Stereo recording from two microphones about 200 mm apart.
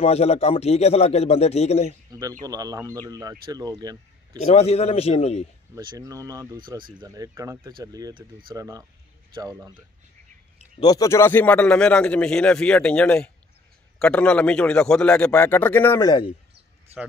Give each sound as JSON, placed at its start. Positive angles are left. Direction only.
{"t": 0.0, "sound": "speech", "side_deg": 30}
{"t": 2.0, "sound": "speech", "side_deg": -20}
{"t": 4.5, "sound": "speech", "side_deg": 30}
{"t": 5.8, "sound": "speech", "side_deg": -20}
{"t": 10.8, "sound": "speech", "side_deg": 20}